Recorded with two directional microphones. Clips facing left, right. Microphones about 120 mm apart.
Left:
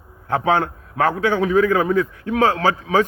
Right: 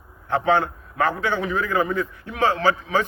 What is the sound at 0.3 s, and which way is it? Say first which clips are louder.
Speech: left 1 dB; 50° left (ahead or behind).